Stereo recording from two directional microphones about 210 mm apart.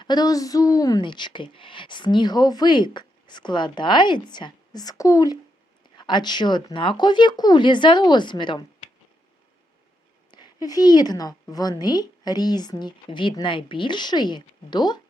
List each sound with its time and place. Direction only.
0.0 s a woman's voice: 20° left (ahead or behind)
10.3 s a woman's voice: 20° left (ahead or behind)